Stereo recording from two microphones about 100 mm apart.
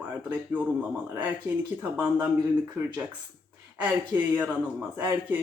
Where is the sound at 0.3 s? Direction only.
15° right (ahead or behind).